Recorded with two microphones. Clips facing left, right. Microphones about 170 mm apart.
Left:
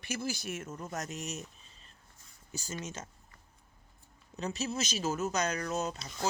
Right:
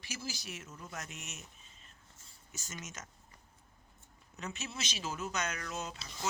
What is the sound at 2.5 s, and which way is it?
Speech, 35° left (ahead or behind).